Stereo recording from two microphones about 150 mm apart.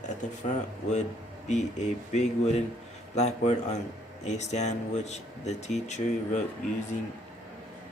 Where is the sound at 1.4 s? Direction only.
50° left (ahead or behind).